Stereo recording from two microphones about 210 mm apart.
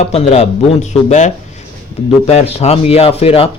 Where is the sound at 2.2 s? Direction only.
30° left (ahead or behind).